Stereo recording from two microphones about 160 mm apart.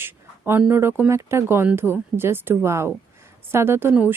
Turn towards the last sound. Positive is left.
turn(degrees=-15)  # may be behind; listen again after turning